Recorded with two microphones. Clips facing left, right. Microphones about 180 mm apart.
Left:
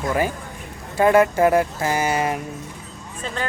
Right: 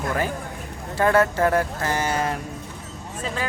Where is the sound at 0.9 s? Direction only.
15° left (ahead or behind).